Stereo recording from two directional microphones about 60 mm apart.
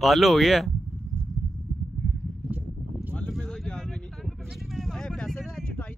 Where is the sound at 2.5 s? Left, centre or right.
Right.